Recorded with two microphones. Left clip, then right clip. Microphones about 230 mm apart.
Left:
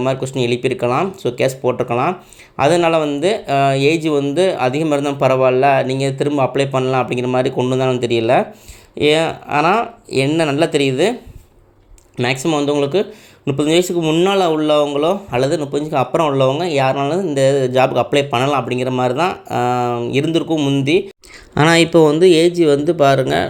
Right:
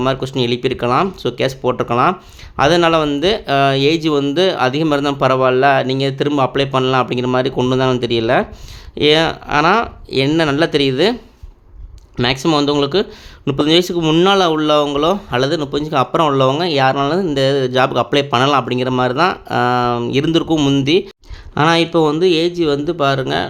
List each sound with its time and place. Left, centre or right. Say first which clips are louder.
0.0 s speech: right 1 dB; centre
12.1 s speech: right 2 dB; centre
21.5 s speech: left 2 dB; centre